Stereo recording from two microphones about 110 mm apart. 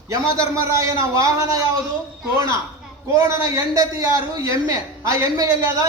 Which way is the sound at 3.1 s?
35° right (ahead or behind).